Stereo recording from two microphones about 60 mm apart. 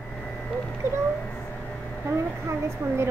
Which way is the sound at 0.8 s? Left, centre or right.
Right.